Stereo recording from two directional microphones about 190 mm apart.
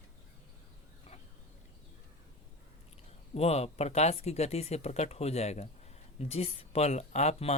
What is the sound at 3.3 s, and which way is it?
Speech, 35° left (ahead or behind).